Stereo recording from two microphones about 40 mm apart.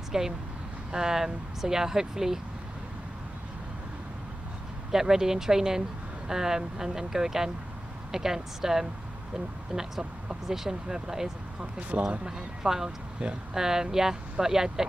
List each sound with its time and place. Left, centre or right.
0.1 s speech: centre
4.9 s speech: centre
10.5 s speech: centre
12.6 s speech: centre
13.2 s speech: right
13.6 s speech: centre